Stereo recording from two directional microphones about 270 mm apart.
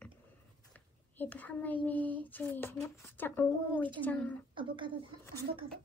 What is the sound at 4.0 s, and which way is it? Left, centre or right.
Speech, centre.